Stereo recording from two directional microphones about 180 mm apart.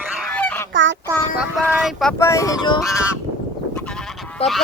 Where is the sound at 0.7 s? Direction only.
90° right.